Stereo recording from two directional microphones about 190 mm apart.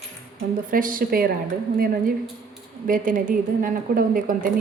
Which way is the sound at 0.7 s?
45° right (ahead or behind).